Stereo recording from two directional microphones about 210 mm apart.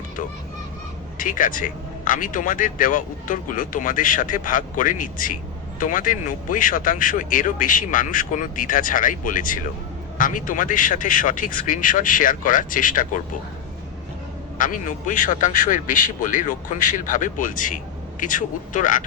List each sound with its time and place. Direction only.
1.2 s a man's voice: 40° left (ahead or behind)
14.6 s a man's voice: 40° left (ahead or behind)